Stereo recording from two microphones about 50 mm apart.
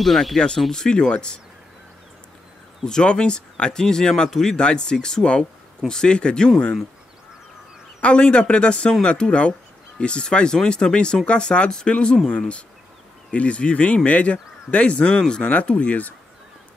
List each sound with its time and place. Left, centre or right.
0.0 s speech: centre
2.8 s speech: centre
8.0 s speech: centre